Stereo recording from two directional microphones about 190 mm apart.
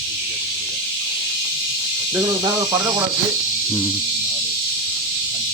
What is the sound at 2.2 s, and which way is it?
Speech, 20° right (ahead or behind).